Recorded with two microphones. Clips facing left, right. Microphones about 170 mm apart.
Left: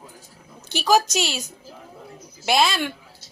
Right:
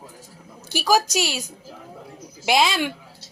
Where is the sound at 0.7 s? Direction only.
5° right (ahead or behind).